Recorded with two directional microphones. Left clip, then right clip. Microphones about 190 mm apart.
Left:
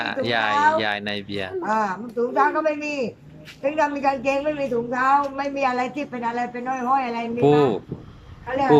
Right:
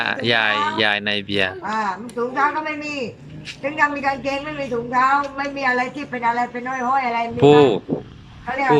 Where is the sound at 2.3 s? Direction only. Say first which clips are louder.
Left 1 dB; 10° left (ahead or behind).